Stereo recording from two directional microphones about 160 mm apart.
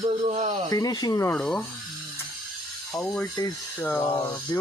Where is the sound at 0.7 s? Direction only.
25° left (ahead or behind).